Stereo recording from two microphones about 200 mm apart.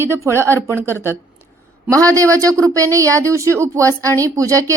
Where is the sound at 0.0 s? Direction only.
10° right (ahead or behind).